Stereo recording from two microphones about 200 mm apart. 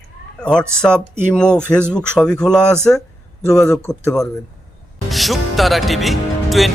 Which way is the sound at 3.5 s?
15° left (ahead or behind).